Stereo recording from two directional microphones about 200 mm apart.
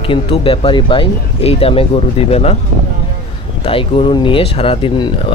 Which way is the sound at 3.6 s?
25° left (ahead or behind).